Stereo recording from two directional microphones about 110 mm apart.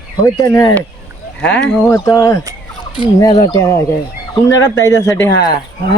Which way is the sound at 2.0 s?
30° left (ahead or behind).